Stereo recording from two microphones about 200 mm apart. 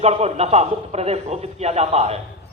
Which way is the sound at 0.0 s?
30° right (ahead or behind).